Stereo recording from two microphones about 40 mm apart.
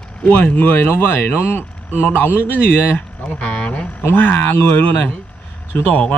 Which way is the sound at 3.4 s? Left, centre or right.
Left.